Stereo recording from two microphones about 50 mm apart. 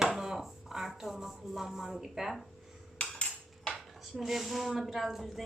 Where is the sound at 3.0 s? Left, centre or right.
Left.